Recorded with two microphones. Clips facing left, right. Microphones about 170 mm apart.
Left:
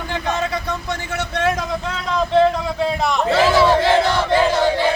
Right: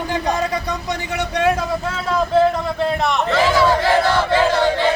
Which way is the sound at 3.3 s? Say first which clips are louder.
Left 2 dB; 25° left (ahead or behind).